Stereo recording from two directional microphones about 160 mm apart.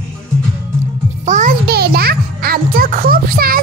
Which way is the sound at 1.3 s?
55° right (ahead or behind).